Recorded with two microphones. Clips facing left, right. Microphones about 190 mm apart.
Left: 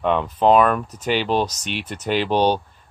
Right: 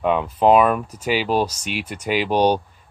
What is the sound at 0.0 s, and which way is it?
Speech, 5° right (ahead or behind).